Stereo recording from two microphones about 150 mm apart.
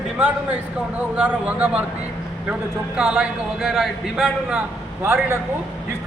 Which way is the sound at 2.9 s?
5° right (ahead or behind).